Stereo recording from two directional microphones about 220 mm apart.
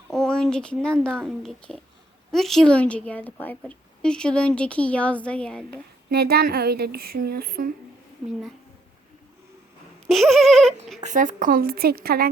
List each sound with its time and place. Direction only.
0.1 s a woman's voice: 5° left (ahead or behind)
6.1 s speech: 45° right (ahead or behind)
10.1 s a woman's voice: centre (ahead or behind)
11.0 s speech: 35° right (ahead or behind)